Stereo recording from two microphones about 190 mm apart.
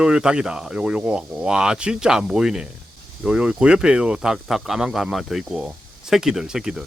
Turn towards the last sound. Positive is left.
turn(degrees=-5)  # may be behind; listen again after turning